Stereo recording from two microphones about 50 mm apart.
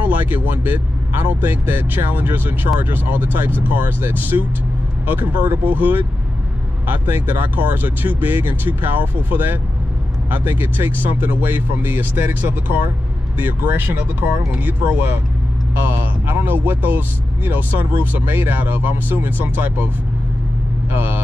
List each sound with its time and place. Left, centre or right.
0.0 s speech: right
20.9 s speech: right